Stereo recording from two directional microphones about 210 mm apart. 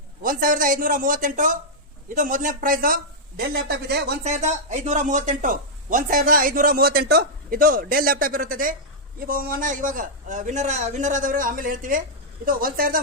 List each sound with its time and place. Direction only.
0.2 s speech: 40° right (ahead or behind)
4.2 s speech: 35° right (ahead or behind)